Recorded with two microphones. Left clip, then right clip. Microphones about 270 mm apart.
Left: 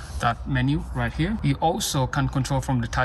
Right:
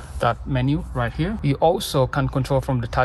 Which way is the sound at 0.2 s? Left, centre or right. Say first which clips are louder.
Right 3 dB; centre.